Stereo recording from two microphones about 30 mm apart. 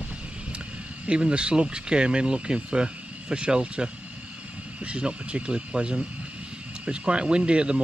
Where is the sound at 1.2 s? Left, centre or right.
Right.